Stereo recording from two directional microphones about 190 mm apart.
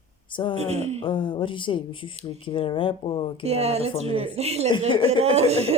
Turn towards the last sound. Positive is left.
turn(degrees=-35)  # may be behind; listen again after turning